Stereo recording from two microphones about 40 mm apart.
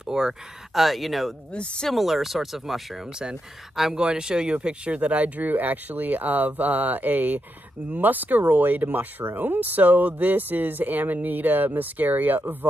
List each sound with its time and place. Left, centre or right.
0.0 s speech: centre
0.7 s speech: centre
1.5 s speech: left
1.9 s speech: centre
3.9 s speech: right